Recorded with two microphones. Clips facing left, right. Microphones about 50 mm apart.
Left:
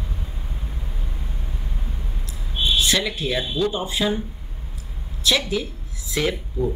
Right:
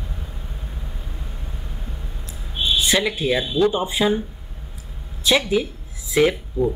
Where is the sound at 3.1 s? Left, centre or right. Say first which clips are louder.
Right 4 dB; right.